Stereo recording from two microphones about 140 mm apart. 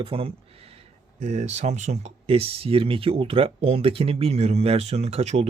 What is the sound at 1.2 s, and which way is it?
Speech, 55° right (ahead or behind).